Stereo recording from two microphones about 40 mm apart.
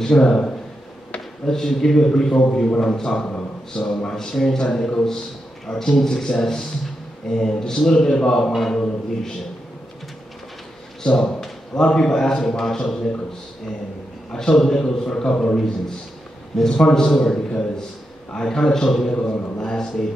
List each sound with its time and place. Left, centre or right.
0.0 s a man's voice: centre
8.5 s mantra: centre
8.7 s a man's voice: centre
11.1 s a man's voice: centre
14.3 s a man's voice: centre
16.8 s a man's voice: centre